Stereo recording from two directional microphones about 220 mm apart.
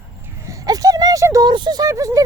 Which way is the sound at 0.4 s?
15° right (ahead or behind).